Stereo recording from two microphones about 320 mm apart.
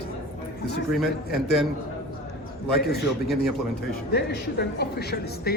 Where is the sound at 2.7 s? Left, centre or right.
Left.